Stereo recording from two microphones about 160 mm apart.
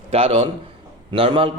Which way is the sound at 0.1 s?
35° right (ahead or behind).